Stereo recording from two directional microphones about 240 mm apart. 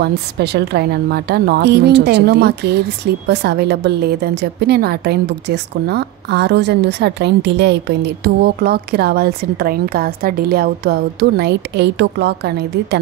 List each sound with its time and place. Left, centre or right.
0.0 s a woman's voice: right